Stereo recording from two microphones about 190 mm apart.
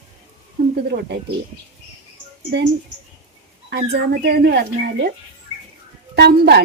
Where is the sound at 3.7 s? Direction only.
60° right (ahead or behind).